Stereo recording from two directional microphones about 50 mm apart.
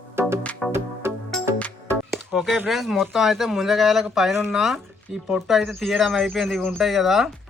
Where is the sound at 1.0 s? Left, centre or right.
Right.